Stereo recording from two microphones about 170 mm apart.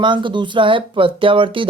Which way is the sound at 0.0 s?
30° right (ahead or behind).